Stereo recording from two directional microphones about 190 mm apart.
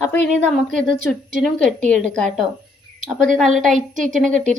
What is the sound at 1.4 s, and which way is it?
A woman's voice, 5° left (ahead or behind).